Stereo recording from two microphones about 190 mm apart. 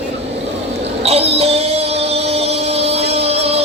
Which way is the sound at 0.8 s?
30° right (ahead or behind).